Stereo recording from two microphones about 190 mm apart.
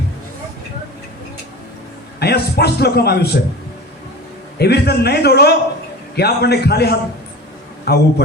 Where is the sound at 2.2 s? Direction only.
60° left (ahead or behind).